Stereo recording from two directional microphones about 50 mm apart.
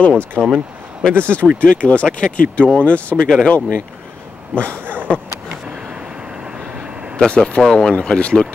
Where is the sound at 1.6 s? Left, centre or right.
Left.